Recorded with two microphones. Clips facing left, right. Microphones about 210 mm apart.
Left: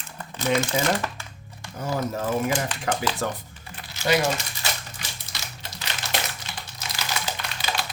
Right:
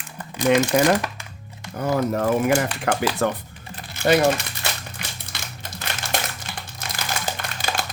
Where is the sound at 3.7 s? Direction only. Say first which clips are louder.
Right 5 dB; 55° right (ahead or behind).